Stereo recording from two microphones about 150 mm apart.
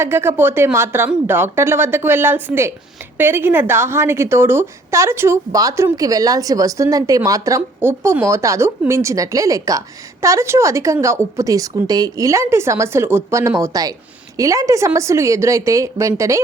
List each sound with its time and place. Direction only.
0.0 s a woman's voice: 15° right (ahead or behind)